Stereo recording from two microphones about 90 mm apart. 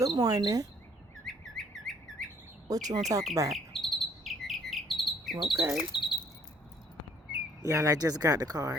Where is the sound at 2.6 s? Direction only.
40° right (ahead or behind).